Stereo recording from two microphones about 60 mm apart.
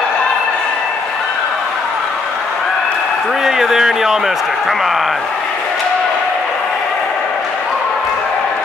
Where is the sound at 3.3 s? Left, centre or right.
Centre.